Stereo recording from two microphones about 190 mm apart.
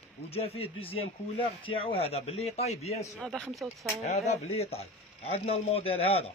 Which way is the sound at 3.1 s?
5° left (ahead or behind).